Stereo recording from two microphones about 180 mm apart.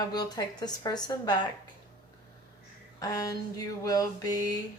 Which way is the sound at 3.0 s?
20° left (ahead or behind).